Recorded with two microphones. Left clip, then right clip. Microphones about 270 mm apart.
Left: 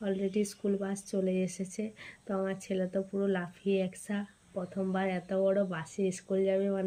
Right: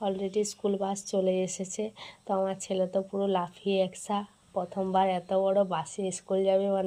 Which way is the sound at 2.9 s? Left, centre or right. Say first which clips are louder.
Right 4 dB; right.